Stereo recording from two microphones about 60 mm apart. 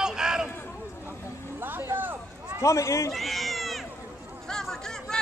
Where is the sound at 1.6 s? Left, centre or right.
Right.